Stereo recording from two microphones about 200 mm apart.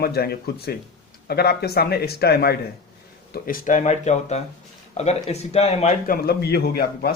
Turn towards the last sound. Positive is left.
turn(degrees=50)  # may be behind; listen again after turning